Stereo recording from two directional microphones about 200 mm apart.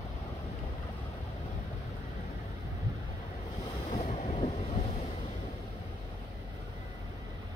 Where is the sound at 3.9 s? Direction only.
35° left (ahead or behind).